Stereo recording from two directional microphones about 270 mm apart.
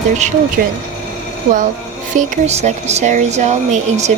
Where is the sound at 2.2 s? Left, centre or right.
Right.